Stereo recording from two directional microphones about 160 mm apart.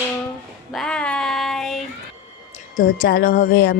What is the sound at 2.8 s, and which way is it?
Speech, 70° left (ahead or behind).